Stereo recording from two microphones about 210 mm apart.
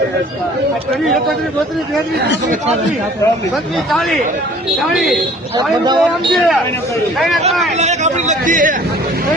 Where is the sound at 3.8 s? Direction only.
Centre (ahead or behind).